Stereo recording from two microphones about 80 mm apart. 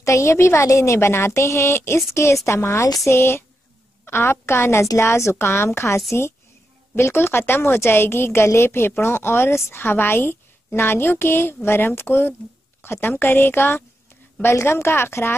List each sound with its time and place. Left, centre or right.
0.0 s a woman's voice: left